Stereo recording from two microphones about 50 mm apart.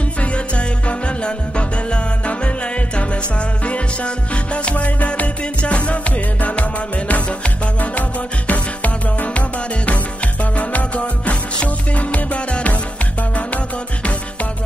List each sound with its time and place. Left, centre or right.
0.2 s music: left
10.4 s music: left